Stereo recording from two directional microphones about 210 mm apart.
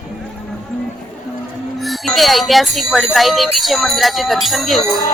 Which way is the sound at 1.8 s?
Centre (ahead or behind).